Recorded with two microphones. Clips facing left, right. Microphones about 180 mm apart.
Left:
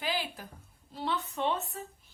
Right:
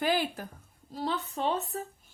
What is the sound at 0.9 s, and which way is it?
Speech, 35° right (ahead or behind).